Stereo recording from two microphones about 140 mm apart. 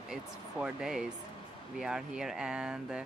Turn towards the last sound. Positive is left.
turn(degrees=-5)  # may be behind; listen again after turning